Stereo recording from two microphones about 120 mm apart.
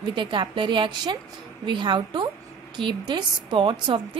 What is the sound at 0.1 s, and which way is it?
A woman's voice, 40° right (ahead or behind).